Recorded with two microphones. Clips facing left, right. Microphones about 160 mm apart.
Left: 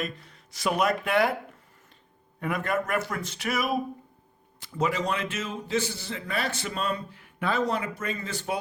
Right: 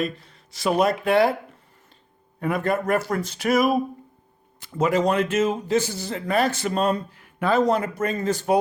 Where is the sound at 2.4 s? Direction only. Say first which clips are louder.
Right 5 dB; 35° right (ahead or behind).